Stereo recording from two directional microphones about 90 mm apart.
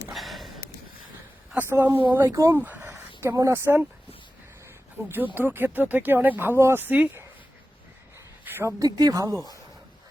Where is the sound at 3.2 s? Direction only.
35° right (ahead or behind).